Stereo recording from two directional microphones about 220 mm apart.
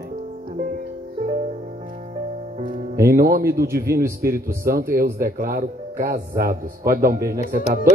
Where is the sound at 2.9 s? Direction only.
40° right (ahead or behind).